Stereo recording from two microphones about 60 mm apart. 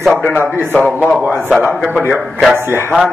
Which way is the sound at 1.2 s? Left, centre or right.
Right.